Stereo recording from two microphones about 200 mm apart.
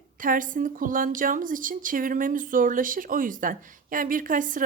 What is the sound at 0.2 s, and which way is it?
A woman's voice, 40° right (ahead or behind).